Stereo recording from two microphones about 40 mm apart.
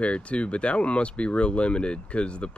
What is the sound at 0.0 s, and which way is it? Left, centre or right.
Speech, left.